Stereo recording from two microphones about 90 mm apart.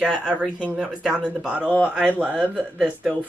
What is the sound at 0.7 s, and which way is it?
Speech, 5° right (ahead or behind).